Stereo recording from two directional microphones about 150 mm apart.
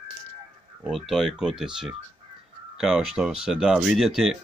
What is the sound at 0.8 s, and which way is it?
Speech, centre (ahead or behind).